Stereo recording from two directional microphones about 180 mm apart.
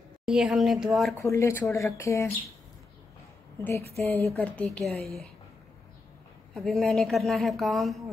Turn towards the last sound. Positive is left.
turn(degrees=0)  # may be behind; listen again after turning